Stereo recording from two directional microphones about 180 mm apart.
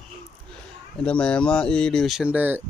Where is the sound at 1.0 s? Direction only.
5° left (ahead or behind).